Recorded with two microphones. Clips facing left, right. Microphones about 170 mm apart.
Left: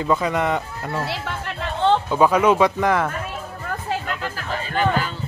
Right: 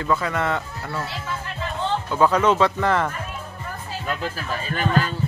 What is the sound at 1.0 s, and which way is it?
Music, 70° left (ahead or behind).